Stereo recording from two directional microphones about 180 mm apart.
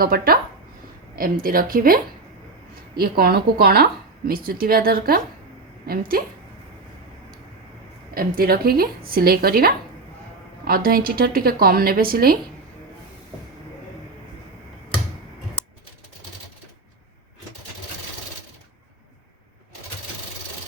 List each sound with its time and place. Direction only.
0.0 s speech: 55° right (ahead or behind)
8.1 s speech: 55° right (ahead or behind)